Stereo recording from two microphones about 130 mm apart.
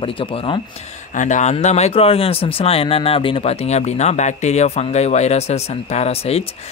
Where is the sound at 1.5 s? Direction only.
55° left (ahead or behind).